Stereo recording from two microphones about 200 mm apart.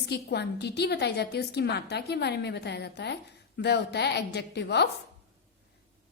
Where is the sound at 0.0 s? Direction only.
55° left (ahead or behind).